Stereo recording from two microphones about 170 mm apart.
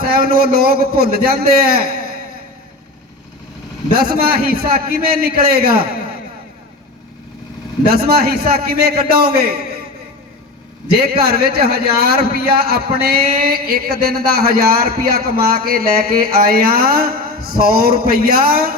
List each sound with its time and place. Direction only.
0.0 s a man's voice: 65° right (ahead or behind)
3.9 s a man's voice: 65° right (ahead or behind)
7.9 s a man's voice: 65° right (ahead or behind)
11.2 s a man's voice: 65° right (ahead or behind)